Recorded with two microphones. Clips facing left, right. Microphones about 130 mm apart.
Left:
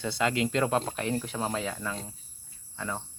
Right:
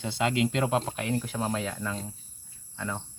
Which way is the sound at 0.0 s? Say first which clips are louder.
Right 1 dB; 20° right (ahead or behind).